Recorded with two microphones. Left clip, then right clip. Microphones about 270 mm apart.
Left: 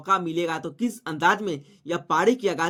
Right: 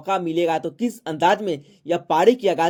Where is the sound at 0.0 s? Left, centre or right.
Centre.